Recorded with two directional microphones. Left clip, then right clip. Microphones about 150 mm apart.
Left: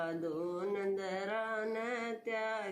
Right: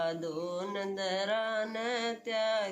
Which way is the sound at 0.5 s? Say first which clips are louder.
Right 1 dB; 45° right (ahead or behind).